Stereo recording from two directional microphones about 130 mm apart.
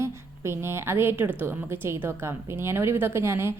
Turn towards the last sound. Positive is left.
turn(degrees=-20)  # may be behind; listen again after turning